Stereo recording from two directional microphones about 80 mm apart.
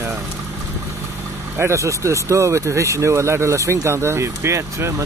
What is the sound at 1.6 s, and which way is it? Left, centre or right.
Speech, right.